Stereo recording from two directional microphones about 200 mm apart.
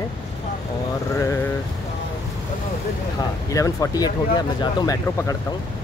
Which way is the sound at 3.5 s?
15° left (ahead or behind).